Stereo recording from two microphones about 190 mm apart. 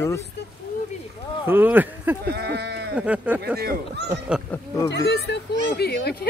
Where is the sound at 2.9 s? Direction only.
5° right (ahead or behind).